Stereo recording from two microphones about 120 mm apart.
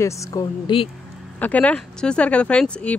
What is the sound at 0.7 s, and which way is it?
Speech, 40° left (ahead or behind).